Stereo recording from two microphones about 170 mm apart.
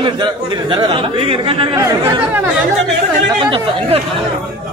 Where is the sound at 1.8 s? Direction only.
15° right (ahead or behind).